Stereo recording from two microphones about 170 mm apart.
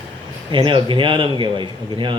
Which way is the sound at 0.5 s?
30° right (ahead or behind).